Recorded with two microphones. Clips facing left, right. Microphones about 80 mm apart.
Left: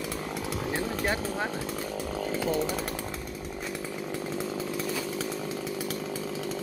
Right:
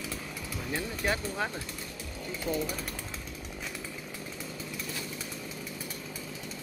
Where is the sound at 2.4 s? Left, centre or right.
Left.